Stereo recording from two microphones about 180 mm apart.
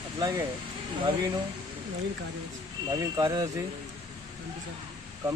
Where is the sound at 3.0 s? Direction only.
20° right (ahead or behind).